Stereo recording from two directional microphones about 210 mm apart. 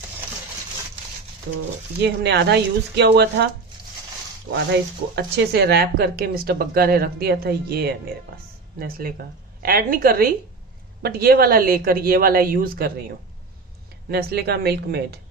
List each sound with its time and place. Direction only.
2.0 s speech: 50° right (ahead or behind)
5.1 s speech: 55° right (ahead or behind)
14.1 s speech: 50° right (ahead or behind)